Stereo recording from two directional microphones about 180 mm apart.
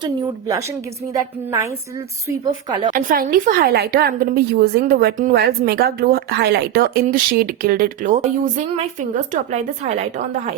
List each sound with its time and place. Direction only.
0.0 s a woman's voice: 20° right (ahead or behind)
2.4 s a woman's voice: 20° right (ahead or behind)
2.9 s a woman's voice: 50° right (ahead or behind)